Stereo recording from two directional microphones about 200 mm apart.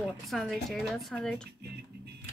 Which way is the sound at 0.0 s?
Centre (ahead or behind).